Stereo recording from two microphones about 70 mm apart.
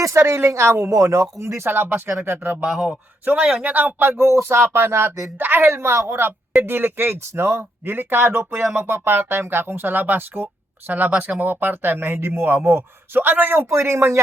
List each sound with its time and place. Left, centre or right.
0.0 s speech: right
2.6 s speech: centre
3.6 s speech: right
4.3 s speech: right
13.7 s speech: right